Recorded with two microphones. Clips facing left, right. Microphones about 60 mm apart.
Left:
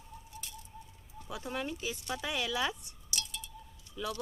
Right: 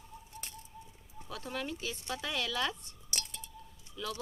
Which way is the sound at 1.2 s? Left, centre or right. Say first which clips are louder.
Left 1 dB; centre.